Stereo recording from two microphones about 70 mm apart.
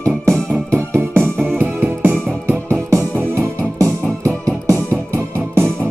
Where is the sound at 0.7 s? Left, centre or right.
Right.